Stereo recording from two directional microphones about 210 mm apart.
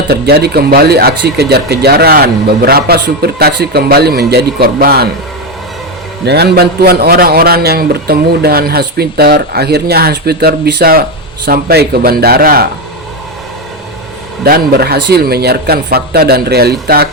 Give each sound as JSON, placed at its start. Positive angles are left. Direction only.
{"t": 0.1, "sound": "speech", "side_deg": -50}
{"t": 6.2, "sound": "speech", "side_deg": -50}
{"t": 14.4, "sound": "speech", "side_deg": -45}